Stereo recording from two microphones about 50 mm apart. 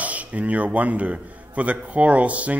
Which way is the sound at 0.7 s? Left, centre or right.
Right.